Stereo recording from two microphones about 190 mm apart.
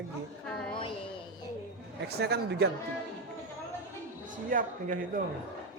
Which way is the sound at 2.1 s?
60° right (ahead or behind).